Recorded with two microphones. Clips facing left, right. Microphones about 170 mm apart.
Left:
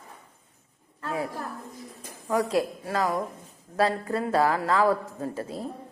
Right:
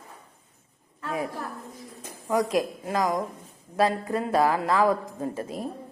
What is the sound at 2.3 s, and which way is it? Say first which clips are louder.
A woman's voice: right 1 dB; 15° right (ahead or behind).